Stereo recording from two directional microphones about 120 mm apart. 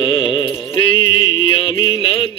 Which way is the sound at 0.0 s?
45° left (ahead or behind).